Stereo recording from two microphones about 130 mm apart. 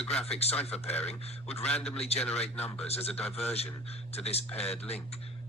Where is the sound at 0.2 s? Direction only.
50° left (ahead or behind).